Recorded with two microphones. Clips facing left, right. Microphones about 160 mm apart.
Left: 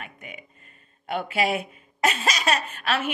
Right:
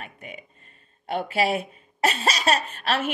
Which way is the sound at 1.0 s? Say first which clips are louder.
Right 1 dB; 35° right (ahead or behind).